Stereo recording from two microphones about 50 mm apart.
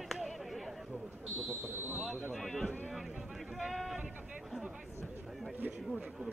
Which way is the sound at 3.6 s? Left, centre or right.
Centre.